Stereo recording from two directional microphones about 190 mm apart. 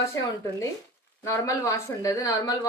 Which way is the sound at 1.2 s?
15° left (ahead or behind).